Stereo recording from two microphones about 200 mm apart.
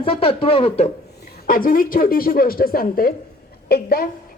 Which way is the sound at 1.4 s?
45° left (ahead or behind).